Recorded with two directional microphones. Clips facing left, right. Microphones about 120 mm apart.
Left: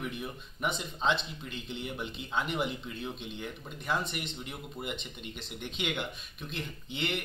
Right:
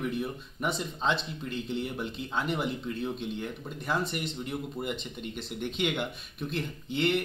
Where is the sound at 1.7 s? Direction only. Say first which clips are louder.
Right 3 dB; 40° right (ahead or behind).